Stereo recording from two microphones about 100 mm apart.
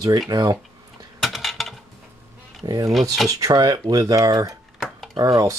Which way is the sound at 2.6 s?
40° right (ahead or behind).